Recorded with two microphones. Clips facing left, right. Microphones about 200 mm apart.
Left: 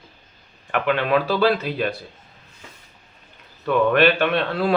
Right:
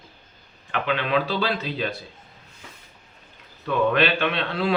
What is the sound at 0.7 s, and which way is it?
A man's voice, 50° left (ahead or behind).